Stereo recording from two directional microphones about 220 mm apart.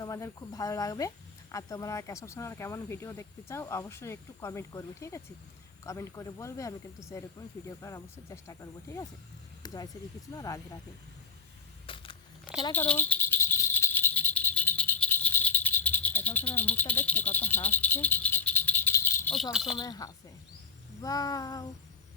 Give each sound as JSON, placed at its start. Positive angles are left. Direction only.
{"t": 0.0, "sound": "speech", "side_deg": 15}
{"t": 11.9, "sound": "a sound", "side_deg": 25}
{"t": 12.7, "sound": "rattle", "side_deg": 10}
{"t": 19.8, "sound": "speech", "side_deg": 15}